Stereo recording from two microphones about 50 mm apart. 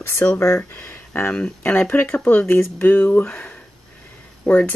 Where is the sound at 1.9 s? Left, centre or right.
Left.